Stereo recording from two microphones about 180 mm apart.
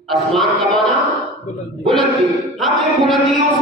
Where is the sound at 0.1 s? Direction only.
Centre (ahead or behind).